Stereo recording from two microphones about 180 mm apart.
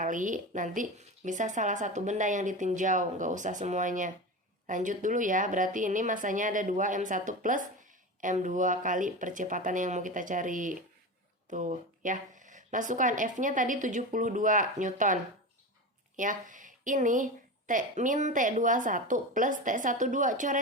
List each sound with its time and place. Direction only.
0.0 s a woman's voice: 45° right (ahead or behind)